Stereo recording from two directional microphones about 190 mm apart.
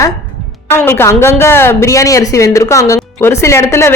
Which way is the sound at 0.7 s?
10° left (ahead or behind).